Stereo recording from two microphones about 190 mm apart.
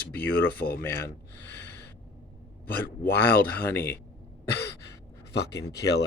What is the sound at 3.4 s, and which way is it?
Speech, 10° left (ahead or behind).